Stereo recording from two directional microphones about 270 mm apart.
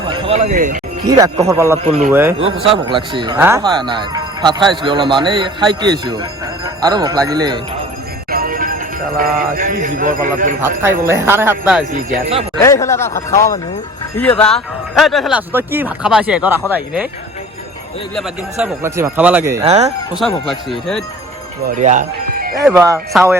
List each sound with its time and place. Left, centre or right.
0.1 s speech: centre
1.0 s speech: centre
2.6 s speech: centre
8.3 s speech: right
10.6 s speech: centre
11.9 s speech: right
12.6 s speech: centre
18.6 s speech: centre
19.6 s speech: right
20.1 s speech: centre
21.8 s speech: right
22.6 s speech: centre